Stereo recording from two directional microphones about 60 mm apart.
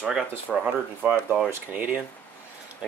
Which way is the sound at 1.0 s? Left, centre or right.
Right.